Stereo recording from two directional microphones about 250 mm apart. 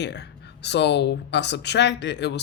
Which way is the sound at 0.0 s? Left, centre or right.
Left.